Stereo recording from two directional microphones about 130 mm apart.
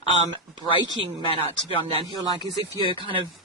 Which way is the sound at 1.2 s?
45° left (ahead or behind).